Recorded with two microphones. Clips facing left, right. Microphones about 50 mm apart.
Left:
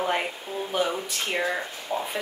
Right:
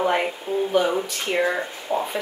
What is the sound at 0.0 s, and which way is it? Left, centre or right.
Speech, centre.